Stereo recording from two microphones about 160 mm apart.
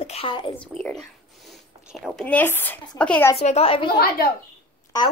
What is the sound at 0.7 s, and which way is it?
Speech, 5° left (ahead or behind).